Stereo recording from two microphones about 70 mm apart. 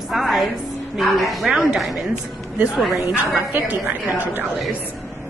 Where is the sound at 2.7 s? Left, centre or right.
Centre.